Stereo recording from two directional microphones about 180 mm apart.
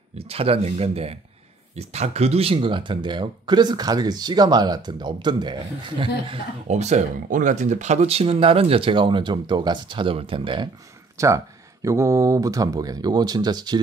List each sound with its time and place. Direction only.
0.2 s speech: 30° right (ahead or behind)
11.1 s speech: 15° right (ahead or behind)